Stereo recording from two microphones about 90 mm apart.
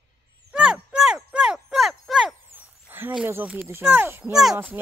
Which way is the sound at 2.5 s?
25° right (ahead or behind).